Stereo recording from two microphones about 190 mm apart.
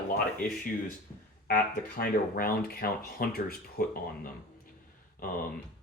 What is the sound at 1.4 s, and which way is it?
Speech, 50° left (ahead or behind).